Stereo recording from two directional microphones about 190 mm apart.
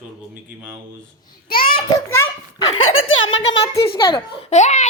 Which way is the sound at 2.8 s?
90° left.